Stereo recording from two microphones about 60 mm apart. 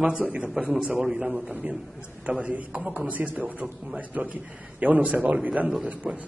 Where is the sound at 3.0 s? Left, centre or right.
Right.